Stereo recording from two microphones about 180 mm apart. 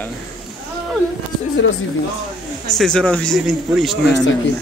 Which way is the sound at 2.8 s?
5° left (ahead or behind).